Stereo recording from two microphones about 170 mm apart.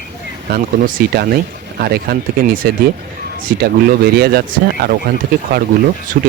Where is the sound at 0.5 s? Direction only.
60° right (ahead or behind).